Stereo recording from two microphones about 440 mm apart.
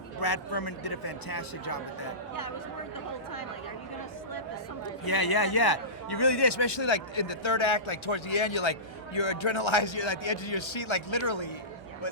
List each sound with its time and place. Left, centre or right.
0.2 s speech: left
5.0 s a man's voice: left